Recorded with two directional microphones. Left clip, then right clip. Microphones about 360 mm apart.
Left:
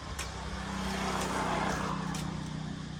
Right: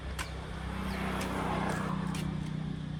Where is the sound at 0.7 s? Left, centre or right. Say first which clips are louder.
Left 3 dB; left.